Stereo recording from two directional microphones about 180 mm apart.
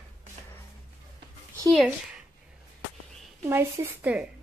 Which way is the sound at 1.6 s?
Centre (ahead or behind).